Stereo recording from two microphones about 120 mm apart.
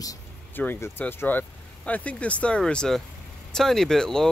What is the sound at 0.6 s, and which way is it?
Speech, 15° left (ahead or behind).